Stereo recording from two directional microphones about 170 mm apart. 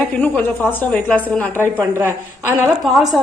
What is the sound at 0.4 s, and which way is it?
A woman's voice, 10° left (ahead or behind).